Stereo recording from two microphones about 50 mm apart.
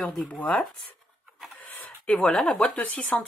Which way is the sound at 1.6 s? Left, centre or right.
Left.